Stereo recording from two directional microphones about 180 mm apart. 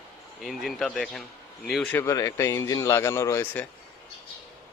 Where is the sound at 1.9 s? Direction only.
15° left (ahead or behind).